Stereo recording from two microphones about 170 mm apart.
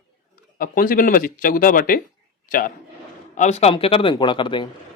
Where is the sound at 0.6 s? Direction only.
55° left (ahead or behind).